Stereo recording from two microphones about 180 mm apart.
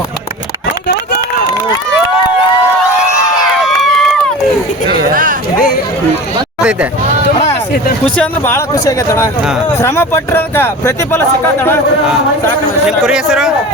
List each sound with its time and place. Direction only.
3.6 s run: centre (ahead or behind)
8.2 s speech: 15° left (ahead or behind)
13.1 s speech: 5° right (ahead or behind)